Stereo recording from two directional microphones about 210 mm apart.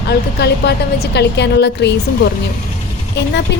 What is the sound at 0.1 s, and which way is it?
A woman's voice, 50° left (ahead or behind).